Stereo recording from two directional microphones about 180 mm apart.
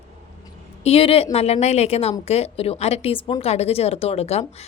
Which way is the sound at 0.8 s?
35° left (ahead or behind).